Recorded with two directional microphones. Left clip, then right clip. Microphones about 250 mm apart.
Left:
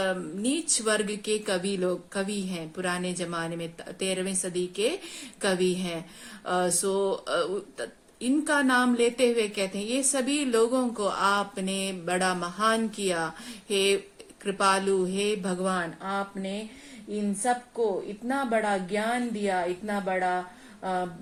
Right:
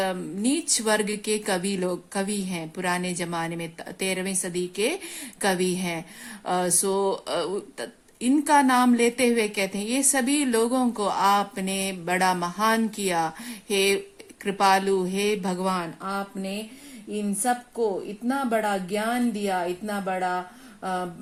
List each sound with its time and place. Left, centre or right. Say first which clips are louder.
0.0 s speech: right 2 dB; right
18.3 s speech: right 2 dB; right